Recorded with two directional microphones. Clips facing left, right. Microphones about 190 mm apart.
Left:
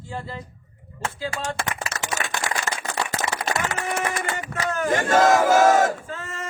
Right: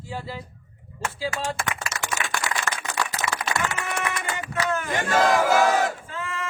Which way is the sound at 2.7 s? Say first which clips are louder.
Left 1 dB; 20° left (ahead or behind).